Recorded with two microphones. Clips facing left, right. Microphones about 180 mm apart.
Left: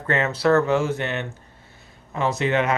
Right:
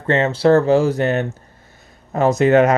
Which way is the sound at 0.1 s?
30° right (ahead or behind).